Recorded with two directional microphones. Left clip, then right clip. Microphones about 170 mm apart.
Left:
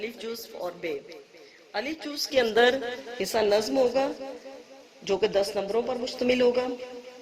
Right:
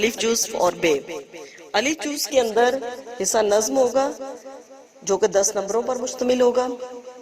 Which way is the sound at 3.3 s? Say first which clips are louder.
Right 5 dB; 5° right (ahead or behind).